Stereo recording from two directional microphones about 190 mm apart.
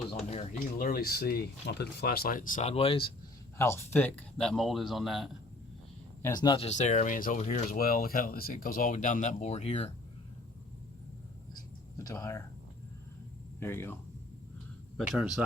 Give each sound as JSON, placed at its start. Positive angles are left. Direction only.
{"t": 0.3, "sound": "a sound", "side_deg": 35}
{"t": 0.8, "sound": "speech", "side_deg": 50}
{"t": 3.6, "sound": "speech", "side_deg": 10}
{"t": 6.2, "sound": "speech", "side_deg": 20}
{"t": 6.7, "sound": "speech", "side_deg": 40}
{"t": 11.5, "sound": "a sound", "side_deg": 15}
{"t": 13.6, "sound": "speech", "side_deg": 10}
{"t": 14.9, "sound": "speech", "side_deg": -5}